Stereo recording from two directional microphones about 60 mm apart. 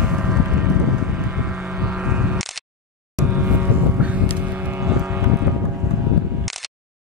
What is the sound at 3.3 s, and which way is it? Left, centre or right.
Vehicle, right.